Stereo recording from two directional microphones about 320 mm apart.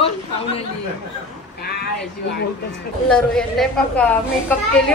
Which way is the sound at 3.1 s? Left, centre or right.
Centre.